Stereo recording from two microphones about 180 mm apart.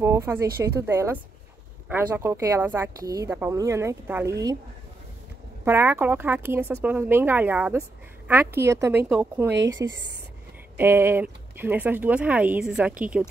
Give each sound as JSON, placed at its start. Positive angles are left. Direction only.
{"t": 0.0, "sound": "speech", "side_deg": -15}
{"t": 5.7, "sound": "speech", "side_deg": -10}
{"t": 9.7, "sound": "speech", "side_deg": -20}